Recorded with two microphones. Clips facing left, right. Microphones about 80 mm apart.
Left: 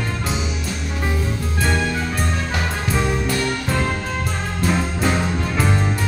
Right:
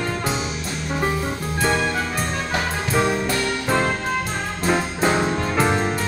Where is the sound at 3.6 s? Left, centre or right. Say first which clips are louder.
Right 2 dB; right.